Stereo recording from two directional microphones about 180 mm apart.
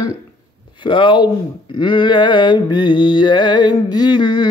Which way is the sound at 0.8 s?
25° left (ahead or behind).